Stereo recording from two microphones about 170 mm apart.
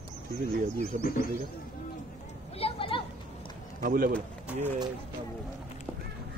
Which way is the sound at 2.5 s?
35° left (ahead or behind).